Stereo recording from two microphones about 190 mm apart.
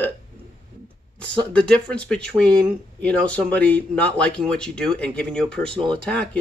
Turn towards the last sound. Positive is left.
turn(degrees=5)  # may be behind; listen again after turning